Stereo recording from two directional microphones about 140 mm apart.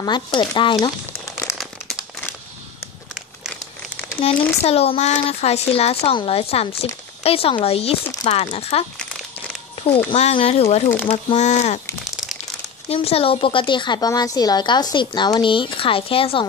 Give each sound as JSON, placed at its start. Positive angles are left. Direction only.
{"t": 0.0, "sound": "a woman's voice", "side_deg": 35}
{"t": 4.2, "sound": "speech", "side_deg": 45}
{"t": 10.1, "sound": "speech", "side_deg": 45}
{"t": 12.8, "sound": "a woman's voice", "side_deg": 45}